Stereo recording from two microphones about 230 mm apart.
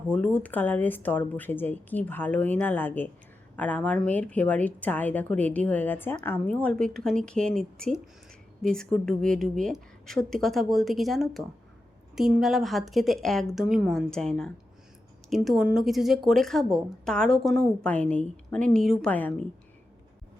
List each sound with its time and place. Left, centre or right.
0.1 s a woman's voice: centre